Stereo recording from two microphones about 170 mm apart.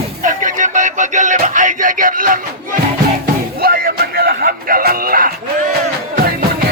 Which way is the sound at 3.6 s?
60° right (ahead or behind).